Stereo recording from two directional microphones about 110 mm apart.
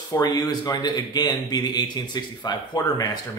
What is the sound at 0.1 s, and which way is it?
A man's voice, 35° left (ahead or behind).